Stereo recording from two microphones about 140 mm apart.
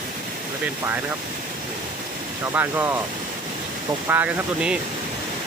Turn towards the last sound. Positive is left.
turn(degrees=-10)  # may be behind; listen again after turning